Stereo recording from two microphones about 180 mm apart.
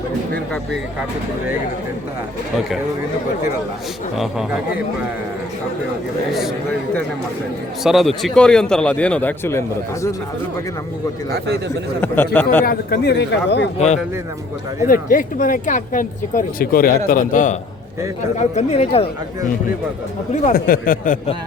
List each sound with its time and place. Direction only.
4.2 s a man's voice: centre (ahead or behind)
7.9 s a man's voice: centre (ahead or behind); by 10.2 s 15° left (ahead or behind)
11.3 s a man's voice: 65° right (ahead or behind)
12.0 s speech: 10° left (ahead or behind)
12.6 s a man's voice: 60° left (ahead or behind)
13.7 s speech: 40° left (ahead or behind)
14.8 s speech: 50° left (ahead or behind)
20.3 s speech: 45° left (ahead or behind)